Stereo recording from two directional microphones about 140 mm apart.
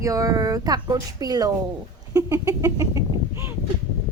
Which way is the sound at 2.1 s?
25° right (ahead or behind).